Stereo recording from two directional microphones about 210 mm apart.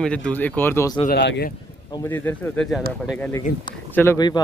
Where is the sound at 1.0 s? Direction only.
55° left (ahead or behind).